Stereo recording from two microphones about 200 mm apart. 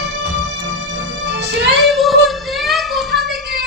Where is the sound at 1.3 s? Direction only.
60° right (ahead or behind).